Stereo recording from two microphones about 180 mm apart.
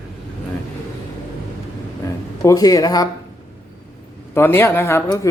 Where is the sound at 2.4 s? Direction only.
20° left (ahead or behind).